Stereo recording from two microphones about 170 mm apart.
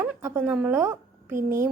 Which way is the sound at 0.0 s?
15° right (ahead or behind).